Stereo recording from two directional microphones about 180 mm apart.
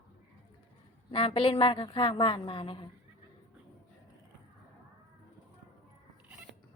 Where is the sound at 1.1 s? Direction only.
30° left (ahead or behind).